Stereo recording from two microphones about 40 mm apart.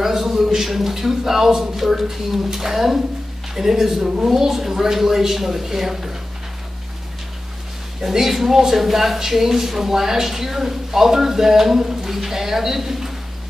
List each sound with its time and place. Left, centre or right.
0.0 s speech: centre
8.0 s speech: centre